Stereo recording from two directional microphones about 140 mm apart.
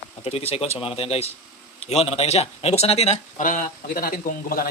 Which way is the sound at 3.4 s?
70° left (ahead or behind).